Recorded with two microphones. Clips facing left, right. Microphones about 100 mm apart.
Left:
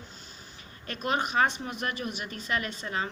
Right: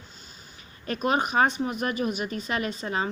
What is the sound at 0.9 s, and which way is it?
A woman's voice, 20° right (ahead or behind).